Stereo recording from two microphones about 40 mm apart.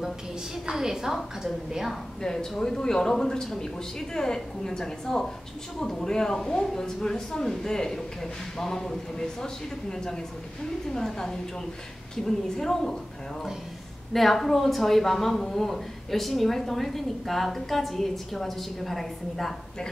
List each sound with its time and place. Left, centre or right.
0.7 s a woman's voice: centre
2.6 s speech: centre
14.1 s speech: centre